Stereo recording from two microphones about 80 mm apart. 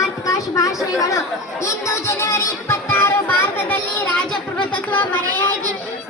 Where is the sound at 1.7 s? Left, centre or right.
Left.